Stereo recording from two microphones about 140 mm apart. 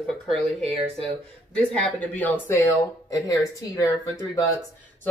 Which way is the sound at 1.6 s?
10° left (ahead or behind).